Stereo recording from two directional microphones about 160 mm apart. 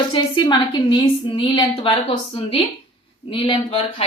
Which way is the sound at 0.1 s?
30° left (ahead or behind).